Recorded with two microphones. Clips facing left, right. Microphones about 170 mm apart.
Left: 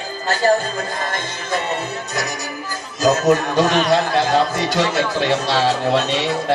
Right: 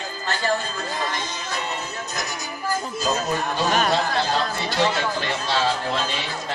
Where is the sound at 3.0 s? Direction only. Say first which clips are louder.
Left 11 dB; 80° left.